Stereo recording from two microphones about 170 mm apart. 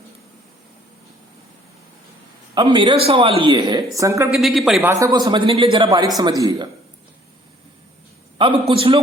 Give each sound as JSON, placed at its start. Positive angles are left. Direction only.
{"t": 2.6, "sound": "a woman's voice", "side_deg": -25}
{"t": 4.4, "sound": "speech", "side_deg": 0}
{"t": 4.9, "sound": "speech", "side_deg": -20}
{"t": 8.4, "sound": "a man's voice", "side_deg": -30}